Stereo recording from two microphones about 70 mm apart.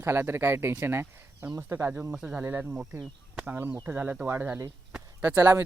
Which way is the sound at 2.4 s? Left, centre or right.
Right.